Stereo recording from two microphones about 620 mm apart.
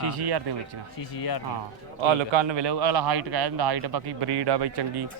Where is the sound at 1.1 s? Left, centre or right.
Left.